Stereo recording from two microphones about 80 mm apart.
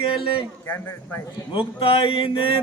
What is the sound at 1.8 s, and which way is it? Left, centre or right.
Speech, left.